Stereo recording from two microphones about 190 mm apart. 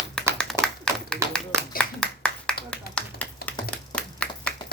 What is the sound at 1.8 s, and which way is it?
Clapping, 5° left (ahead or behind).